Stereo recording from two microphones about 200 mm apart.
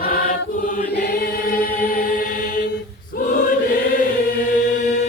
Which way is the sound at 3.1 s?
45° left (ahead or behind).